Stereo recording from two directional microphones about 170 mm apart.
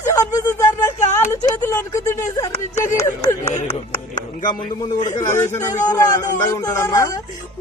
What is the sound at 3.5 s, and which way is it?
Speech, 45° left (ahead or behind).